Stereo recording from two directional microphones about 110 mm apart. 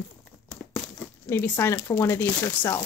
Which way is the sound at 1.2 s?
20° left (ahead or behind).